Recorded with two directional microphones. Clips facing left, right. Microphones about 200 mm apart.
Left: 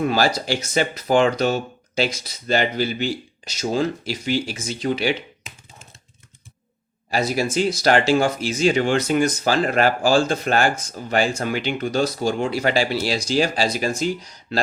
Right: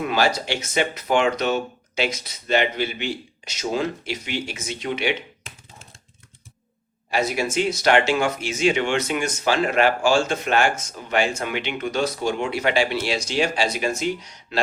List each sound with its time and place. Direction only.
0.0 s speech: 35° left (ahead or behind)
7.1 s speech: 35° left (ahead or behind)